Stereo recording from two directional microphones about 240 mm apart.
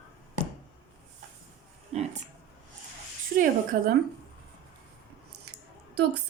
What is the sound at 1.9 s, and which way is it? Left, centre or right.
Speech, right.